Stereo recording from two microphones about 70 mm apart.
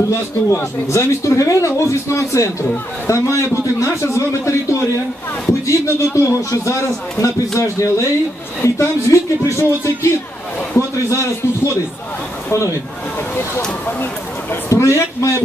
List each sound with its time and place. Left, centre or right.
0.5 s speech: left
14.7 s speech: left